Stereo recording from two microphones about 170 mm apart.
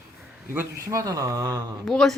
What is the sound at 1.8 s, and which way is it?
Speech, centre (ahead or behind).